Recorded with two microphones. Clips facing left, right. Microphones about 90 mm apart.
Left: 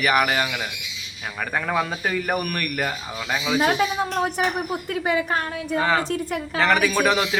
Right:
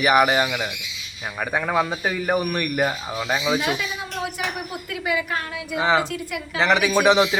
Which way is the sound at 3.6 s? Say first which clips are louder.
Left 5 dB; 45° left (ahead or behind).